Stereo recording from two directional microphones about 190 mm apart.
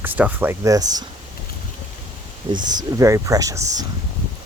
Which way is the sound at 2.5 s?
20° right (ahead or behind).